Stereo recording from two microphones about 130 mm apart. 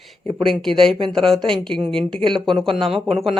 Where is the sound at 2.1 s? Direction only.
35° right (ahead or behind).